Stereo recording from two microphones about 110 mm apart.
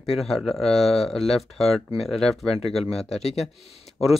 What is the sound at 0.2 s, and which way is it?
Speech, centre (ahead or behind).